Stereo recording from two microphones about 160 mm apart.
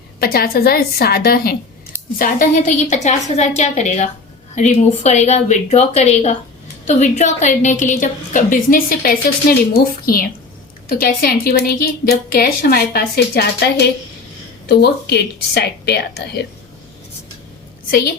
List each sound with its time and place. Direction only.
0.2 s a woman's voice: 70° left (ahead or behind)
2.1 s a woman's voice: 60° left (ahead or behind); by 16.4 s 90° left